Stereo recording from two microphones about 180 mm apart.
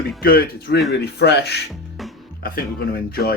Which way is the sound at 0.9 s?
65° left (ahead or behind).